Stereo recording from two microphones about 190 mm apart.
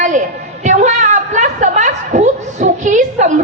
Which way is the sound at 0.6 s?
40° right (ahead or behind).